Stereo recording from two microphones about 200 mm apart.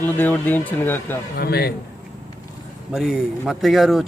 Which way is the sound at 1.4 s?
50° left (ahead or behind).